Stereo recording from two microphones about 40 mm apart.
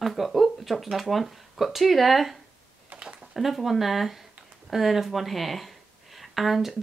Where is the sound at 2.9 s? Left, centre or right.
Right.